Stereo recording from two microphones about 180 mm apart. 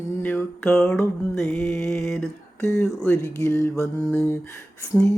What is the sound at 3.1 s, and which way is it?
Mantra, 15° left (ahead or behind).